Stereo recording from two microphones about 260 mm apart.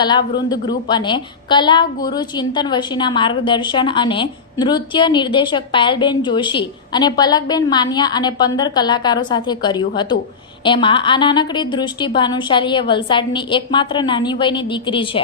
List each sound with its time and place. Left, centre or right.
0.0 s a woman's voice: centre